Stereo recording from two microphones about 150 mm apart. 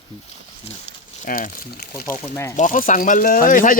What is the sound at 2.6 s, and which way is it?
Speech, 60° left (ahead or behind).